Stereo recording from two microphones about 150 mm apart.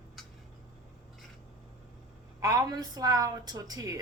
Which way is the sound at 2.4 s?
20° right (ahead or behind).